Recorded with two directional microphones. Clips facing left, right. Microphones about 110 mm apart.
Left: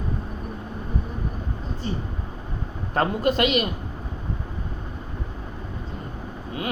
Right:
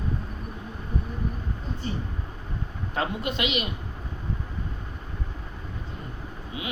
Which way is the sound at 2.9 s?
45° left (ahead or behind).